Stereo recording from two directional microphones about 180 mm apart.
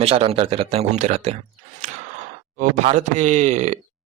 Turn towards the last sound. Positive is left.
turn(degrees=-40)  # may be behind; listen again after turning